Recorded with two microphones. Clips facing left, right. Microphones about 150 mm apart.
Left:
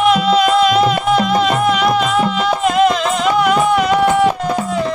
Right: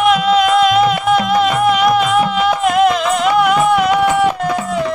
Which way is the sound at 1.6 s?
10° right (ahead or behind).